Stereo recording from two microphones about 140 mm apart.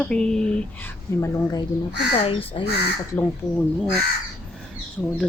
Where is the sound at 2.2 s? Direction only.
40° left (ahead or behind).